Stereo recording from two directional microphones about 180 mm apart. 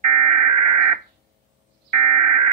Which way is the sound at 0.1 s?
40° right (ahead or behind).